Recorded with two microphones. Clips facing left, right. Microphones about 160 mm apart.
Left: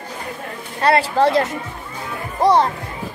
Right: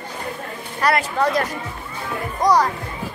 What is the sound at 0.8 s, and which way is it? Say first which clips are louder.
Speech: left 4 dB; 30° left (ahead or behind).